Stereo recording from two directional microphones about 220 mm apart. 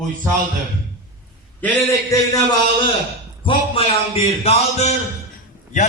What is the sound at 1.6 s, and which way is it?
Speech, 15° left (ahead or behind).